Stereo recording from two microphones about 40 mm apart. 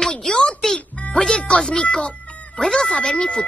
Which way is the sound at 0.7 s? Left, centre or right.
Left.